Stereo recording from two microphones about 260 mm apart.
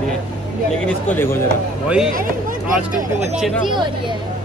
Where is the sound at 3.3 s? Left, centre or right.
Centre.